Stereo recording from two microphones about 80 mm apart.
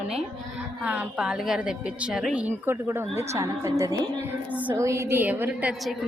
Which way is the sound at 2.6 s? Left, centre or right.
Right.